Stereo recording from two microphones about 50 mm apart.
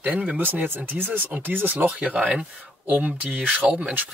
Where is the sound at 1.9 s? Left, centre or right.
Right.